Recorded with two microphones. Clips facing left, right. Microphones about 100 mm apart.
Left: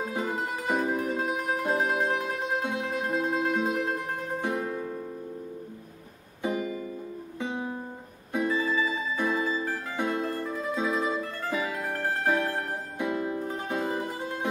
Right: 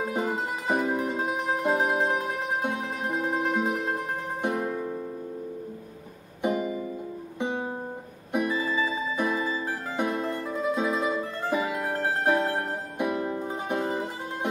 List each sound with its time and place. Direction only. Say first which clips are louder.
0.1 s music: right 2 dB; 15° right (ahead or behind)
6.4 s music: right 3 dB; 20° right (ahead or behind)